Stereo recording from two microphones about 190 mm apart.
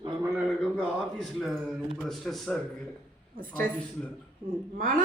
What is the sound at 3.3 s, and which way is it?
Speech, 45° right (ahead or behind).